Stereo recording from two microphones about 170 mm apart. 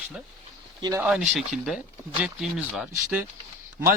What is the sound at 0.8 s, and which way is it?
Speech, 20° right (ahead or behind).